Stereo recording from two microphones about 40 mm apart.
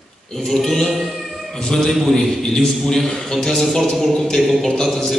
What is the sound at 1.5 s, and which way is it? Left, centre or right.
A man's voice, centre.